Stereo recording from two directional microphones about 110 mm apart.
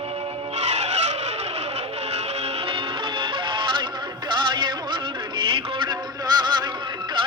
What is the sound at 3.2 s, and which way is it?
Music, 50° right (ahead or behind).